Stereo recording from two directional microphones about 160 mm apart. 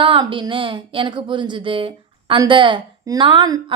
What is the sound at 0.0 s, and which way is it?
A woman's voice, 30° right (ahead or behind).